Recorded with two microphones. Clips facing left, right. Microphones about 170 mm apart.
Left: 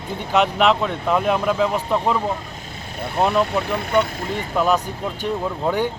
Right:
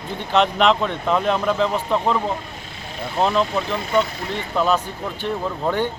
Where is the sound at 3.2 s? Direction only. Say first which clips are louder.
Left 1 dB; 10° left (ahead or behind).